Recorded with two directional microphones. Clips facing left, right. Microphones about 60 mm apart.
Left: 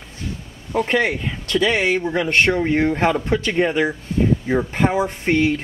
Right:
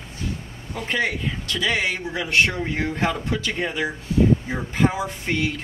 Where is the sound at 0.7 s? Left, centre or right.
Left.